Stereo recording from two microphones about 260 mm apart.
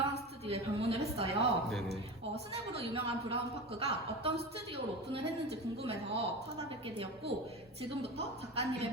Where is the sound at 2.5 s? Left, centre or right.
Right.